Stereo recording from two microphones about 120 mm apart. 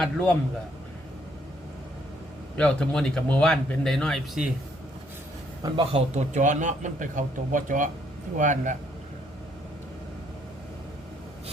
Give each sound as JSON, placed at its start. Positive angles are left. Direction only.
{"t": 0.0, "sound": "speech", "side_deg": 10}
{"t": 2.6, "sound": "speech", "side_deg": 10}
{"t": 5.6, "sound": "a man's voice", "side_deg": -45}
{"t": 6.1, "sound": "a man's voice", "side_deg": -85}